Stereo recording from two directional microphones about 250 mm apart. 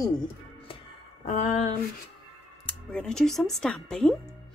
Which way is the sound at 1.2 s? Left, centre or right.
Left.